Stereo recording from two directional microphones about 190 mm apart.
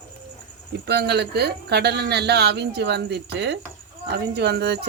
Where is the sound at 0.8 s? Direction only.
60° right (ahead or behind).